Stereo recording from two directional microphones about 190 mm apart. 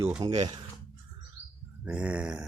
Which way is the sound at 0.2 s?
30° right (ahead or behind).